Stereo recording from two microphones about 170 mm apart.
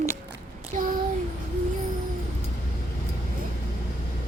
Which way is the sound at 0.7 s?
50° right (ahead or behind).